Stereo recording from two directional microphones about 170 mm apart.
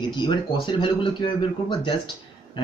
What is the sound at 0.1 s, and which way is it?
Speech, 25° left (ahead or behind).